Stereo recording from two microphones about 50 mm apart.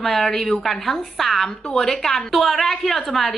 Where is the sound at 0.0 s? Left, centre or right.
Centre.